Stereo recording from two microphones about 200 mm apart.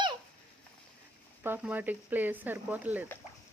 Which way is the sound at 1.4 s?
10° right (ahead or behind).